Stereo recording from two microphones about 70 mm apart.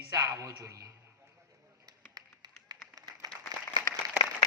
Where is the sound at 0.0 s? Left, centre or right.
Right.